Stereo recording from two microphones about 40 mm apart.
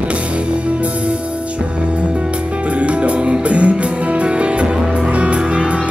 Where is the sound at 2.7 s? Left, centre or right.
Right.